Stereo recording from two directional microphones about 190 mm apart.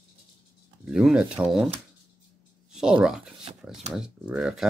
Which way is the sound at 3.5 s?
30° right (ahead or behind).